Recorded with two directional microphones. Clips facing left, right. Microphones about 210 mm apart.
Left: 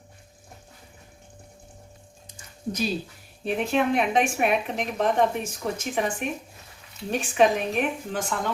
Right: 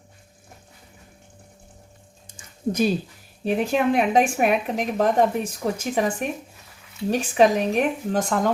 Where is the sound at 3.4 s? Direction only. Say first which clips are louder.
Right 3 dB; 35° right (ahead or behind).